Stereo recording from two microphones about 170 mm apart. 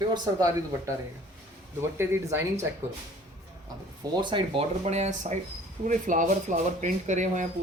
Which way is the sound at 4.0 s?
30° right (ahead or behind).